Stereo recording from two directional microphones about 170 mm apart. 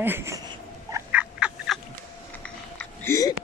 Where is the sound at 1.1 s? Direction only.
5° right (ahead or behind).